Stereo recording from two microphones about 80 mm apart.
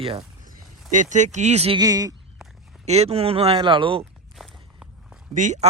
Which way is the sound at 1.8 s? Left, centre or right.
Right.